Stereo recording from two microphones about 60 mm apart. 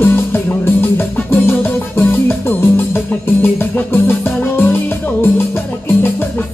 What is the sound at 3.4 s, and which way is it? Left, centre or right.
Music, left.